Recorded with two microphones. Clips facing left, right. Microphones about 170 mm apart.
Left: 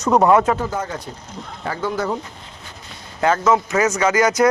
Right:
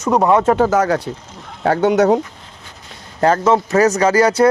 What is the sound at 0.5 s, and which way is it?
Speech, 75° right (ahead or behind).